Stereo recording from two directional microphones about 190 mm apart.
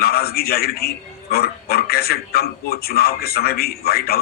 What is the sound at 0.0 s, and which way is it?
A man's voice, 55° left (ahead or behind).